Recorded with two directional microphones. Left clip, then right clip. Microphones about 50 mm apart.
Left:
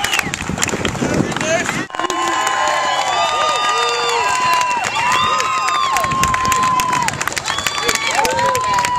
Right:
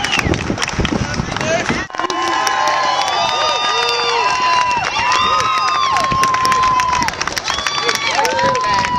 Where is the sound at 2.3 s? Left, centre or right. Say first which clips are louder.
Right 2 dB; left.